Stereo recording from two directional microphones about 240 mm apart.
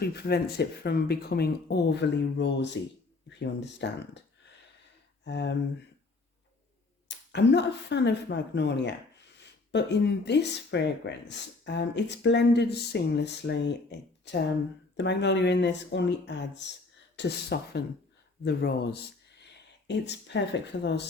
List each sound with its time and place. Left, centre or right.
0.0 s speech: left
5.2 s speech: left
7.1 s speech: left